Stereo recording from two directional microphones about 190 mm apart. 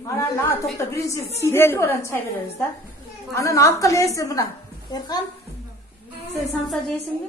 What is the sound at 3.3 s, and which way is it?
A woman's voice, 15° left (ahead or behind).